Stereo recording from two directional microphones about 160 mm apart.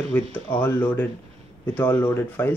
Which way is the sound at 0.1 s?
10° left (ahead or behind).